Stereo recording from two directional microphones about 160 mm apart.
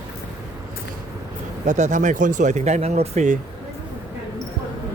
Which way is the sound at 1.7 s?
50° right (ahead or behind).